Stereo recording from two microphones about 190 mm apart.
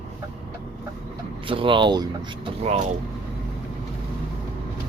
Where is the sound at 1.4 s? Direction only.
25° right (ahead or behind).